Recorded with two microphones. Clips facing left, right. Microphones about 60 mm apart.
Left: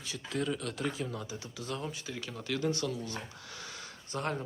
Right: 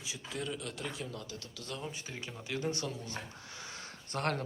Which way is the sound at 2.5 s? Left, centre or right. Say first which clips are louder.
Left 3 dB; right.